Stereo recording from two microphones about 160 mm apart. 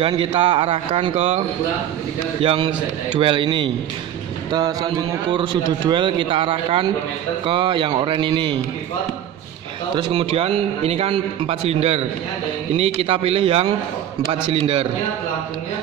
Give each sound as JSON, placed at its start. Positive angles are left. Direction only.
{"t": 0.0, "sound": "a man's voice", "side_deg": -35}
{"t": 2.4, "sound": "a man's voice", "side_deg": -35}
{"t": 10.1, "sound": "a man's voice", "side_deg": -35}